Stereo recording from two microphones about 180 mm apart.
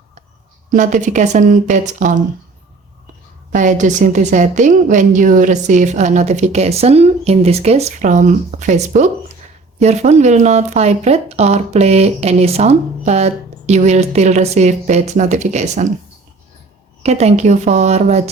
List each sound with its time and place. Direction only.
0.7 s speech: 45° right (ahead or behind)
3.5 s speech: 45° right (ahead or behind)
17.0 s speech: 35° right (ahead or behind)